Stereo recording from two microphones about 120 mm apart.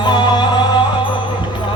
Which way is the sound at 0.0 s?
40° left (ahead or behind).